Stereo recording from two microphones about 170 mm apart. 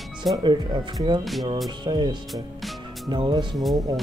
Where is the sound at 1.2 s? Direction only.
Centre (ahead or behind).